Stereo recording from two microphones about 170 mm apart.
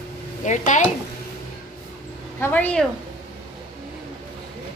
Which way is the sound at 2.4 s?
10° left (ahead or behind).